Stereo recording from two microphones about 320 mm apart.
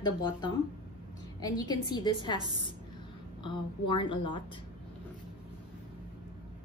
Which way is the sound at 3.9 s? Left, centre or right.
Centre.